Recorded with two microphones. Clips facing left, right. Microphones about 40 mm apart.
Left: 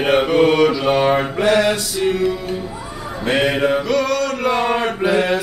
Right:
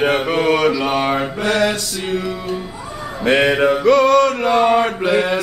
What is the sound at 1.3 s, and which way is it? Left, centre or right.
Mantra, centre.